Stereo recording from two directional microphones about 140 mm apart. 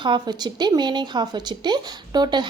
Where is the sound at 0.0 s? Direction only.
30° right (ahead or behind).